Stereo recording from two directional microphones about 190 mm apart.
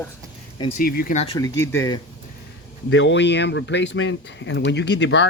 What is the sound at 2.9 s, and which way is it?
Speech, 75° left (ahead or behind).